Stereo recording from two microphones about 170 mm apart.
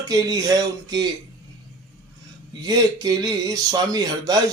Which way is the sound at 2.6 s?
20° right (ahead or behind).